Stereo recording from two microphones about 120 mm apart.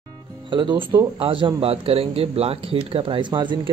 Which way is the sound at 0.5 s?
45° right (ahead or behind).